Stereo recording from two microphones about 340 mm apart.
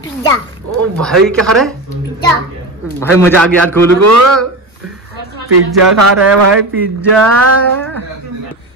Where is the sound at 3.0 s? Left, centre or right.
Centre.